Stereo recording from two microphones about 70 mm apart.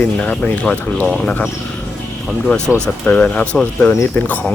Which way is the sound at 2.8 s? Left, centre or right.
Centre.